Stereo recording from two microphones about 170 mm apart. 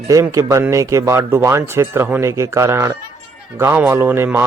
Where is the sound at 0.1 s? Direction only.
20° right (ahead or behind).